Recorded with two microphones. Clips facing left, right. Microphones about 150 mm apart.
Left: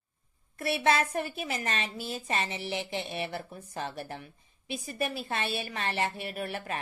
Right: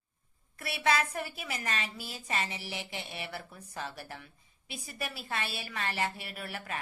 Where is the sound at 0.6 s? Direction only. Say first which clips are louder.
Left 3 dB; 25° left (ahead or behind).